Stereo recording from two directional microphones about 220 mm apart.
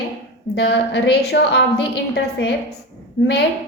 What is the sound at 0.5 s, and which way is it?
A woman's voice, 50° left (ahead or behind).